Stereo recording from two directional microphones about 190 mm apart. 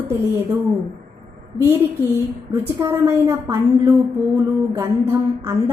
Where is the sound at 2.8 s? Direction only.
15° right (ahead or behind).